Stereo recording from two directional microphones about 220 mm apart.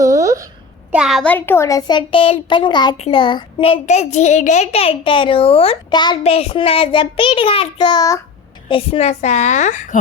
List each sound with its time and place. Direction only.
0.0 s a sound: 15° right (ahead or behind)
0.9 s a child's voice: 5° right (ahead or behind); by 8.2 s 15° left (ahead or behind)
8.7 s a woman's voice: 30° left (ahead or behind)